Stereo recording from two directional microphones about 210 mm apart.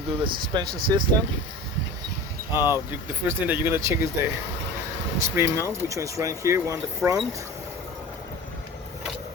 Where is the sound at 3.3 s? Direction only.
10° right (ahead or behind).